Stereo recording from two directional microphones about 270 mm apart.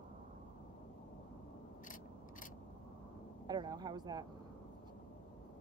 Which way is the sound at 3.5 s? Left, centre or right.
Centre.